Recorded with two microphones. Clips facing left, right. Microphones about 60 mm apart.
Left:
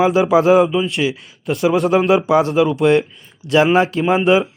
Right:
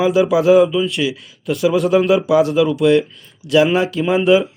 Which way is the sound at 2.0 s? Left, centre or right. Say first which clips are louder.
Even; left.